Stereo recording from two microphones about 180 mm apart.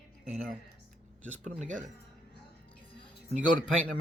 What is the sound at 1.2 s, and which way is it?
Speech, 5° left (ahead or behind).